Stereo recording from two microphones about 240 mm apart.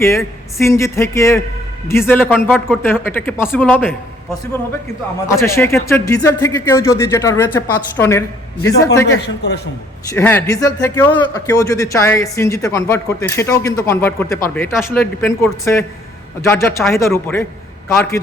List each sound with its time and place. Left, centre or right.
0.6 s speech: centre
2.3 s a man's voice: centre
2.8 s speech: centre
5.3 s speech: centre
9.0 s speech: left
10.1 s speech: centre